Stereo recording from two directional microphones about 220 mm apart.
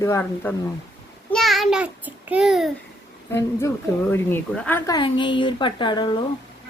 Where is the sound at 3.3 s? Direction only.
10° left (ahead or behind).